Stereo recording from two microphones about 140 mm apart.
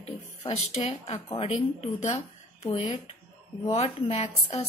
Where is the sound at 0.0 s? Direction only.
45° left (ahead or behind).